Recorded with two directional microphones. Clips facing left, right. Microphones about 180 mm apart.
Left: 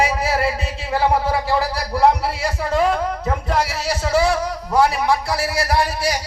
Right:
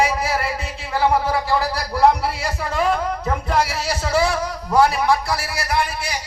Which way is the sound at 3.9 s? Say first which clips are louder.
Left 2 dB; 20° left (ahead or behind).